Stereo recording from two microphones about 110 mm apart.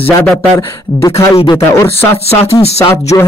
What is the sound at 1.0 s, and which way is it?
Speech, 25° left (ahead or behind).